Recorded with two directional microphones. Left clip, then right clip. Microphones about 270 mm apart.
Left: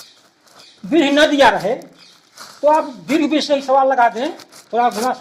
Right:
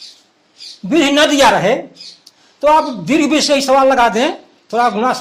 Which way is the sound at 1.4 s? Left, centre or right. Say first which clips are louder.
Right 3 dB; right.